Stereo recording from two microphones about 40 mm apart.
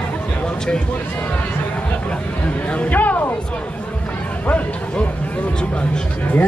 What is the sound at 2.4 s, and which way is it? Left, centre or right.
Music, left.